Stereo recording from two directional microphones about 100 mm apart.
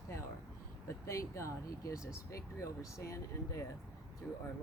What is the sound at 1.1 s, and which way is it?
Speech, 30° left (ahead or behind).